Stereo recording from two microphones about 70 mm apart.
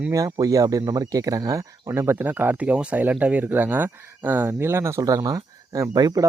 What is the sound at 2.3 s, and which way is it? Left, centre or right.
Speech, right.